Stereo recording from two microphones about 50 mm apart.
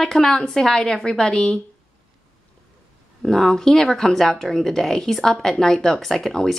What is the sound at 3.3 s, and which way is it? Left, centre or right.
Speech, centre.